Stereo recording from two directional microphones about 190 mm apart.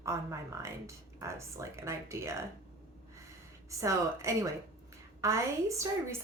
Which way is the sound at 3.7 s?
15° right (ahead or behind).